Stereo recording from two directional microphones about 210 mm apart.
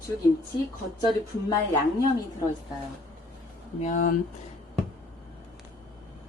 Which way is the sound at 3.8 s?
35° left (ahead or behind).